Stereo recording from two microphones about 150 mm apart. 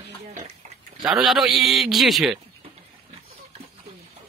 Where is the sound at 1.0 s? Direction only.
Centre (ahead or behind).